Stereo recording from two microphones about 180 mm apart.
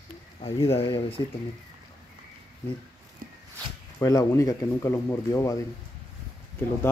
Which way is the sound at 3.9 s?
20° left (ahead or behind).